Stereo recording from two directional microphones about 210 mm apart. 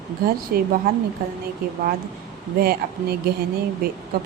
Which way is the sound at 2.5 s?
45° right (ahead or behind).